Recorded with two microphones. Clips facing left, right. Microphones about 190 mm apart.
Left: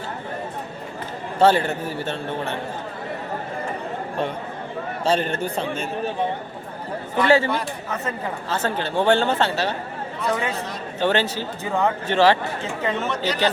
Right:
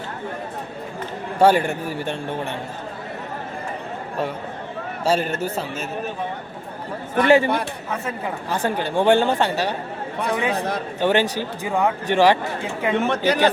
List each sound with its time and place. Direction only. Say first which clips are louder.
1.4 s speech: right 1 dB; 10° right (ahead or behind)
5.0 s speech: right 1 dB; 5° right (ahead or behind)
7.2 s speech: right 2 dB; 15° right (ahead or behind)
11.0 s speech: right 2 dB; 15° right (ahead or behind)
13.1 s speech: right 5 dB; 55° right (ahead or behind)